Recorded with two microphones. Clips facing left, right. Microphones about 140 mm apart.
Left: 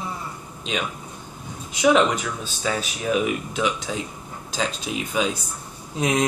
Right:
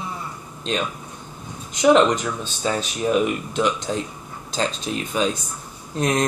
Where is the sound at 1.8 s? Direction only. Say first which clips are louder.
Right 3 dB; 5° left (ahead or behind).